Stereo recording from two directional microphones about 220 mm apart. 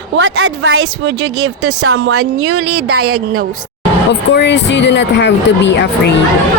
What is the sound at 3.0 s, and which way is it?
Speech, 80° right.